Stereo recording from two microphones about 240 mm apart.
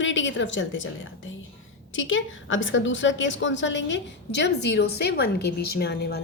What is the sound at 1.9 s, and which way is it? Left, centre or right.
A woman's voice, left.